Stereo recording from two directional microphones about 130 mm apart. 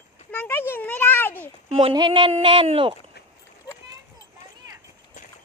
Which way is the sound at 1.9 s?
40° right (ahead or behind).